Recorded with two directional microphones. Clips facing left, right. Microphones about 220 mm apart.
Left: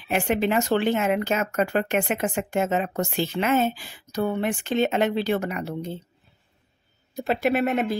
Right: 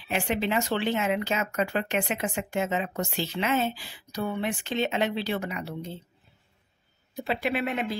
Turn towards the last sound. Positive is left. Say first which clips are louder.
# left 6 dB
turn(degrees=45)  # may be behind; listen again after turning